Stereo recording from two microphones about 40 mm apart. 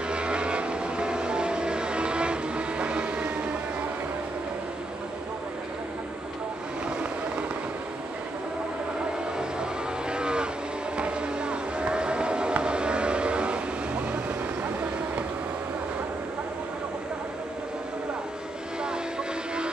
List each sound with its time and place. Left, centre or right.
0.1 s vehicle: right
9.4 s cattle: right
11.0 s a sound: right